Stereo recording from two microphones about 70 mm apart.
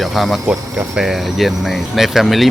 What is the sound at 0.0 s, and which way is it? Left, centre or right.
Speech, centre.